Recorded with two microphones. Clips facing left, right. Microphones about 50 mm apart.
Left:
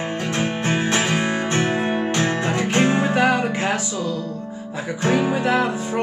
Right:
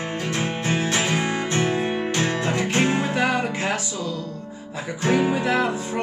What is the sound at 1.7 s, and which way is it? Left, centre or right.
Music, left.